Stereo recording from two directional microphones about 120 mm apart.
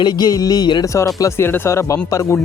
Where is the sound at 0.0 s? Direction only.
35° left (ahead or behind).